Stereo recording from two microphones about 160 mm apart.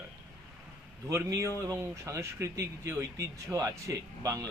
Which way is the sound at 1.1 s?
20° right (ahead or behind).